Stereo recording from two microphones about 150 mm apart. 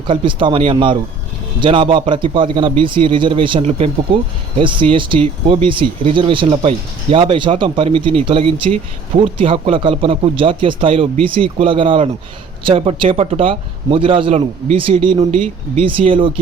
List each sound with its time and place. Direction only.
0.1 s a man's voice: 35° right (ahead or behind)